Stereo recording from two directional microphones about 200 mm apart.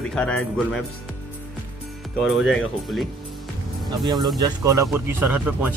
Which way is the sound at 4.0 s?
20° right (ahead or behind).